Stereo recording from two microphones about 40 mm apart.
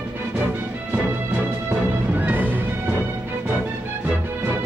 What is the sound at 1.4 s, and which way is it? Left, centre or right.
Music, right.